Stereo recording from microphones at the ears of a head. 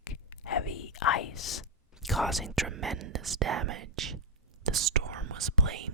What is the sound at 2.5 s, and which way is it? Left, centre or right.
Speech, right.